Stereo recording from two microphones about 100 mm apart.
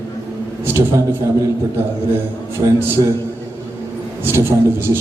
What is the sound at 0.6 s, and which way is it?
Speech, 25° right (ahead or behind).